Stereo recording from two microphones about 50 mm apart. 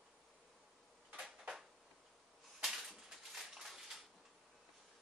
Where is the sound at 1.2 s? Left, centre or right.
Centre.